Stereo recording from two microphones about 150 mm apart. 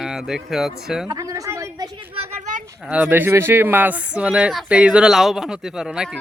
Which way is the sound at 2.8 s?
10° right (ahead or behind).